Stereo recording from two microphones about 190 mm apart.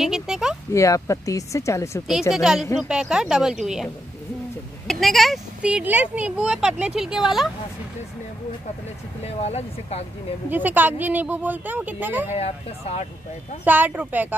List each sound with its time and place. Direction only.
0.0 s speech: centre (ahead or behind)
0.7 s speech: 15° left (ahead or behind)
2.3 s speech: centre (ahead or behind)
9.2 s speech: 35° left (ahead or behind)
10.5 s speech: 10° right (ahead or behind)
12.4 s speech: 35° left (ahead or behind)
13.7 s speech: 10° right (ahead or behind)